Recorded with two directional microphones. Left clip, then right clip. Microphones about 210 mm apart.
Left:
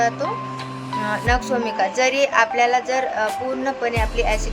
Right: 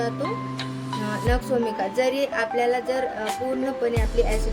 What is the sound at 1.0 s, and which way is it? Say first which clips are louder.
Speech: left 5 dB; 15° right (ahead or behind).